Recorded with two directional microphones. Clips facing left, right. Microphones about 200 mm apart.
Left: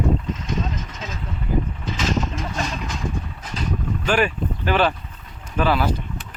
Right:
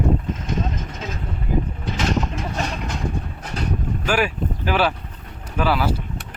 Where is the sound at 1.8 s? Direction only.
60° right (ahead or behind).